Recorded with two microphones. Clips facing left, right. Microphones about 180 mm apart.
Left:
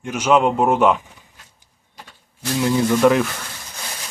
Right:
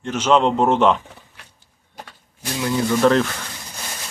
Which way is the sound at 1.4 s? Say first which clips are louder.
Right 3 dB; 70° right (ahead or behind).